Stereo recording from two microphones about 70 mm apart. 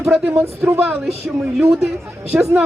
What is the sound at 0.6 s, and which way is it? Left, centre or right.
Speech, right.